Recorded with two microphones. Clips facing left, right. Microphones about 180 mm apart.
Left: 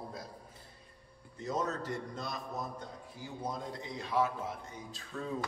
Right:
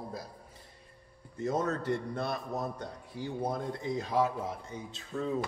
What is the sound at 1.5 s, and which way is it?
A man's voice, 55° right (ahead or behind).